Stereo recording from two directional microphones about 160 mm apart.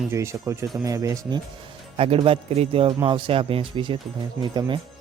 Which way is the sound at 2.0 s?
35° right (ahead or behind).